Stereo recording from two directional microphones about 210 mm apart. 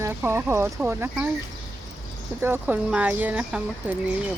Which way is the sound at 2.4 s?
10° right (ahead or behind).